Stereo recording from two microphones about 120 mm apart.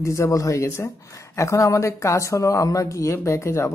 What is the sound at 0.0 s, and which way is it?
A woman's voice, 25° left (ahead or behind).